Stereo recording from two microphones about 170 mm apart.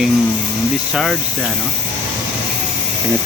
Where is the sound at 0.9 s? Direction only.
Centre (ahead or behind).